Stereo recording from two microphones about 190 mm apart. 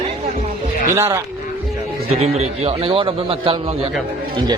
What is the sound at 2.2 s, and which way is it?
A man's voice, 35° right (ahead or behind).